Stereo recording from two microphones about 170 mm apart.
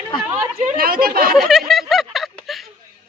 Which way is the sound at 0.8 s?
60° right (ahead or behind).